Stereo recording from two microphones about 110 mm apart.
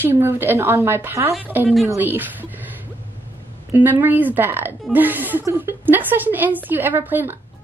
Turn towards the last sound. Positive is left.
turn(degrees=-20)  # may be behind; listen again after turning